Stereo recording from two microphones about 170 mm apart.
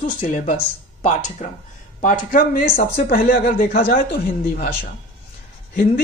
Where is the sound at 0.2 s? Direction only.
50° left (ahead or behind).